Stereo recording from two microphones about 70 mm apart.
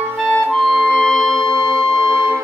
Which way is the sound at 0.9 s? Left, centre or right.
Centre.